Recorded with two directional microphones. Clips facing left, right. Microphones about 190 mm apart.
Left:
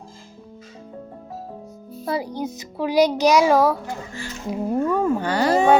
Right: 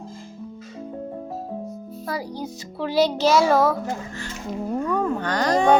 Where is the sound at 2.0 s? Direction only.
25° left (ahead or behind).